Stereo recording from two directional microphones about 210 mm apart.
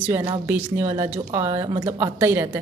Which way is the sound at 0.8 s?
30° right (ahead or behind).